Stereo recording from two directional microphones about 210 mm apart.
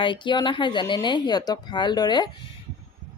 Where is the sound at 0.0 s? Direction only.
20° left (ahead or behind).